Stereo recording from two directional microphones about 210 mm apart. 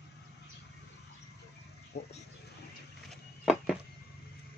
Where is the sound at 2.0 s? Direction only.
50° left (ahead or behind).